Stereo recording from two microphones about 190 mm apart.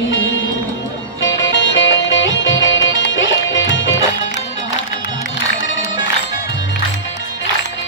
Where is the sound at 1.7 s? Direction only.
80° left.